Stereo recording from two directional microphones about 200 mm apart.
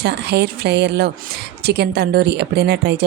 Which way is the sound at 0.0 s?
55° right (ahead or behind).